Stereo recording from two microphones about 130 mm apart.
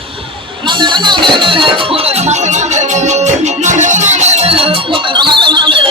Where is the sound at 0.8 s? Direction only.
35° right (ahead or behind).